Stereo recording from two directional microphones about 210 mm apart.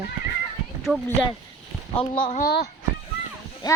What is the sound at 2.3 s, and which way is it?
Speech, 45° left (ahead or behind).